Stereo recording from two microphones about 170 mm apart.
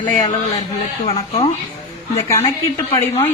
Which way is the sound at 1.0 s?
35° left (ahead or behind).